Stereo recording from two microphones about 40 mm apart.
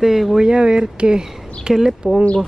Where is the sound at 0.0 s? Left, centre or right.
Centre.